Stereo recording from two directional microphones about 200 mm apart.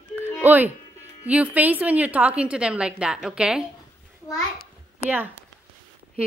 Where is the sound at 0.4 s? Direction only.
10° right (ahead or behind).